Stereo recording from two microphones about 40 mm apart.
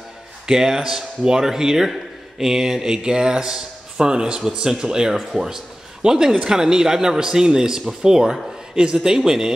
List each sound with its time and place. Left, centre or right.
0.5 s a man's voice: centre